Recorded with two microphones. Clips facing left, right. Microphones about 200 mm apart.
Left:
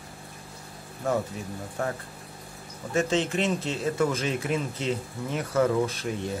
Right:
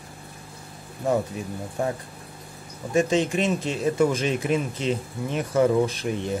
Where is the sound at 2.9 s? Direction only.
15° right (ahead or behind).